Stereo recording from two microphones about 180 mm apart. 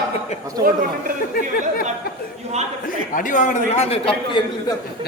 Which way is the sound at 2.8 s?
50° left (ahead or behind).